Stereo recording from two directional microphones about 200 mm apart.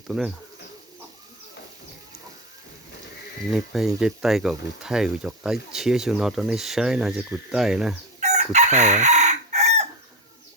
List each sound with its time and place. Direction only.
0.1 s speech: 5° right (ahead or behind)
3.5 s speech: centre (ahead or behind)
8.2 s chicken: 35° right (ahead or behind)